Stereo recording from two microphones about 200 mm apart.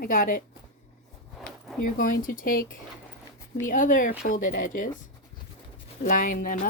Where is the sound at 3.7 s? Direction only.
40° left (ahead or behind).